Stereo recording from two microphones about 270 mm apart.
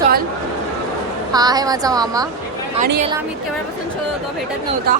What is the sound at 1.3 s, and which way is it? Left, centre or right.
A woman's voice, centre.